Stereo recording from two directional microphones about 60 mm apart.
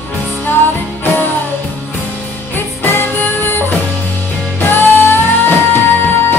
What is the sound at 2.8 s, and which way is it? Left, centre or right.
Music, left.